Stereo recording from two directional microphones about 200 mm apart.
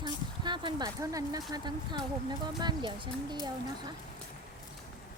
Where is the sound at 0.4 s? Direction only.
25° right (ahead or behind).